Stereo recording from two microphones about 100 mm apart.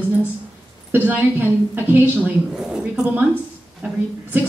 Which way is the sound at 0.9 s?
20° right (ahead or behind).